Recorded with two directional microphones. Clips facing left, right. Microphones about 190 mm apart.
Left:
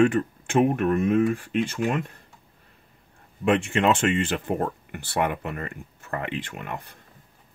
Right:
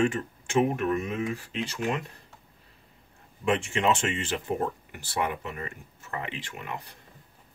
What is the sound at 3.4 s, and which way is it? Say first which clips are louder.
Speech: left 4 dB; 60° left (ahead or behind).